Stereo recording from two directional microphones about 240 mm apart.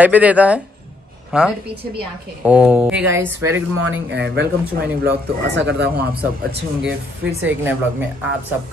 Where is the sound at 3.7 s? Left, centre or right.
Right.